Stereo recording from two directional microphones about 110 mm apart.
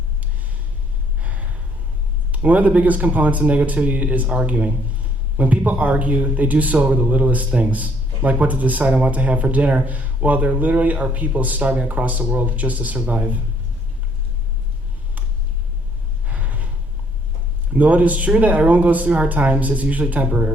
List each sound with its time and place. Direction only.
1.2 s gasp: 15° right (ahead or behind)
2.3 s a man's voice: 15° right (ahead or behind)
16.2 s gasp: 15° right (ahead or behind)
17.7 s a man's voice: 15° right (ahead or behind)